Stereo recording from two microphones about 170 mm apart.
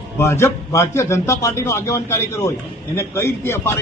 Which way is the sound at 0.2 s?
15° left (ahead or behind).